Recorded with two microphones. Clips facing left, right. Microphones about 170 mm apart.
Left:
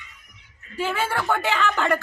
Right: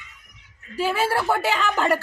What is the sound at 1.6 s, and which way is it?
Speech, 35° right (ahead or behind).